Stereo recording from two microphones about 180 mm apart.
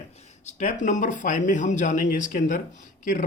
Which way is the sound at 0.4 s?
45° left (ahead or behind).